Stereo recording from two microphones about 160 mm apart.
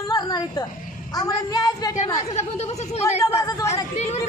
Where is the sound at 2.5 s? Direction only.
40° left (ahead or behind).